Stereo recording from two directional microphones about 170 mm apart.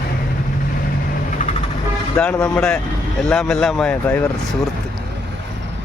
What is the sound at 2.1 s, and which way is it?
Speech, 5° left (ahead or behind).